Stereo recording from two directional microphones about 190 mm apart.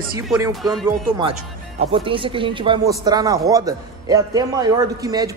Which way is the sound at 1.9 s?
25° right (ahead or behind).